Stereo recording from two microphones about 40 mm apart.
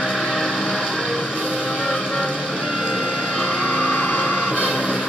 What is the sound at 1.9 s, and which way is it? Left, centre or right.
Music, left.